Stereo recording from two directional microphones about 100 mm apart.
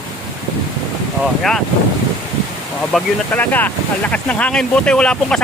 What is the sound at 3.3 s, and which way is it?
Speech, 15° left (ahead or behind).